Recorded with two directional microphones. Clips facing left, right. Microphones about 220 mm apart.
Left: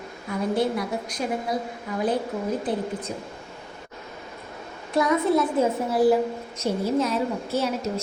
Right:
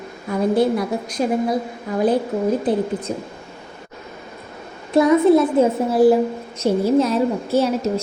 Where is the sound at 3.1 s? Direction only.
30° right (ahead or behind).